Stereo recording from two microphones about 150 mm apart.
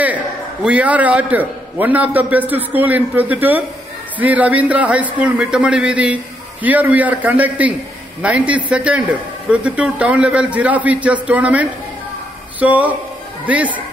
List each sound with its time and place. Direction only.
0.7 s a man's voice: 10° right (ahead or behind)